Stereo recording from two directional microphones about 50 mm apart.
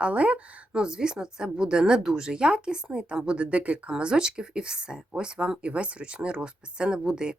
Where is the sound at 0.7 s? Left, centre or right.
Centre.